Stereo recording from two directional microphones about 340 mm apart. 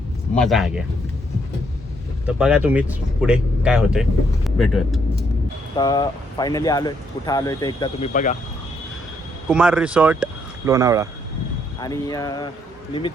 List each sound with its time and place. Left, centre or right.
0.3 s speech: centre
2.2 s speech: centre
5.7 s speech: centre
9.5 s speech: centre
11.8 s speech: centre